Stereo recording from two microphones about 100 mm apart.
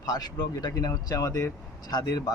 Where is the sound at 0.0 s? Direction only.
40° left (ahead or behind).